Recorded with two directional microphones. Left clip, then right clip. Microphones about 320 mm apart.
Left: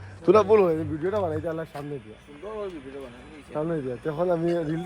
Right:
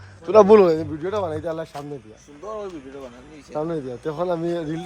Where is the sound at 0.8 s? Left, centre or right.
Centre.